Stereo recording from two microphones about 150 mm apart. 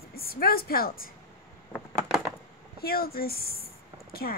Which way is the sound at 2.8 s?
90° left.